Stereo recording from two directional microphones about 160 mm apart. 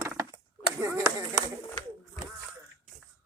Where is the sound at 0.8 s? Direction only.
20° right (ahead or behind).